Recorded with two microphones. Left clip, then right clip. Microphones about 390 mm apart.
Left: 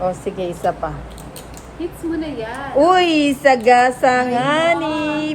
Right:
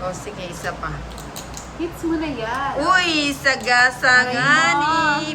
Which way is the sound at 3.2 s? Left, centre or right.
Centre.